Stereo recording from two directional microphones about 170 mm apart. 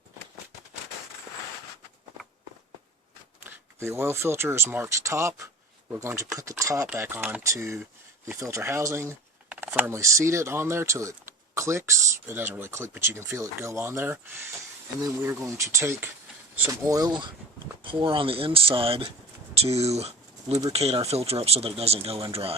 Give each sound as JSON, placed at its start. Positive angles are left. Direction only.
{"t": 3.4, "sound": "speech", "side_deg": -15}